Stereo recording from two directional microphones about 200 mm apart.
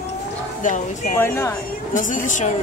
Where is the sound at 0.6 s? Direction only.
40° left (ahead or behind).